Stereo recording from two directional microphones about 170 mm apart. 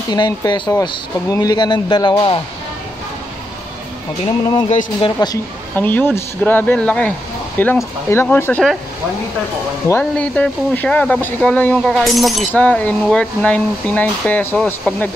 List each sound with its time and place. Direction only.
0.1 s speech: 25° left (ahead or behind)
4.6 s speech: 40° left (ahead or behind)
5.8 s speech: 10° left (ahead or behind)
9.8 s speech: 10° left (ahead or behind)